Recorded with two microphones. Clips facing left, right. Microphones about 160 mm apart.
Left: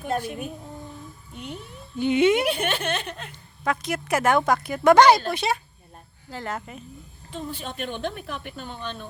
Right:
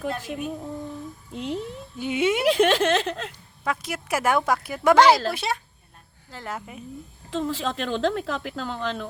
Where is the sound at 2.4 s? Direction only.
90° right.